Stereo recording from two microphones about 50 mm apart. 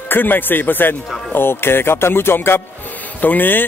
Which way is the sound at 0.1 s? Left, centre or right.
Left.